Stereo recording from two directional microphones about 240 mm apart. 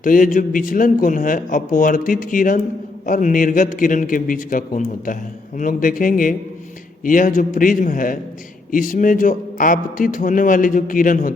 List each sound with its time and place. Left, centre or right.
0.0 s a man's voice: left